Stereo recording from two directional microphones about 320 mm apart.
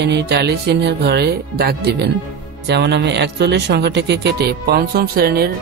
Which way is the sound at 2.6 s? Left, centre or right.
Right.